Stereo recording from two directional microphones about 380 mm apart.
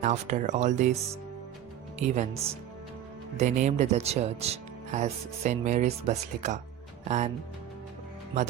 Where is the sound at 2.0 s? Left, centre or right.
Centre.